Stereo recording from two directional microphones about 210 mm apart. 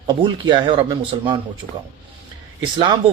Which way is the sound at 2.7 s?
20° right (ahead or behind).